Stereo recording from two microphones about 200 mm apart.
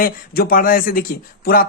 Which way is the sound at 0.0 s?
45° left (ahead or behind).